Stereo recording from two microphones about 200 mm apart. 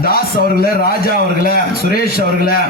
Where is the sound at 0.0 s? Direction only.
50° left (ahead or behind).